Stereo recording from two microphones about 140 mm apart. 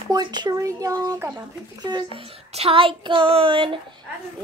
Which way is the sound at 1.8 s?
30° right (ahead or behind).